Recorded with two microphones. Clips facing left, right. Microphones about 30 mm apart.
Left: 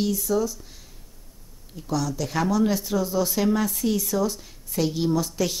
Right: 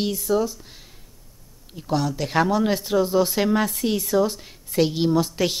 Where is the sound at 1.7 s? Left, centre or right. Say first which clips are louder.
Right 3 dB; right.